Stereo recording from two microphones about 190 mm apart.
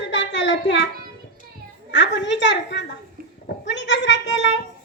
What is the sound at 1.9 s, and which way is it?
Speech, 70° left (ahead or behind).